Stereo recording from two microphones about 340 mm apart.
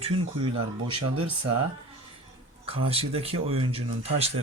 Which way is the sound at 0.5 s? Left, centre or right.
Right.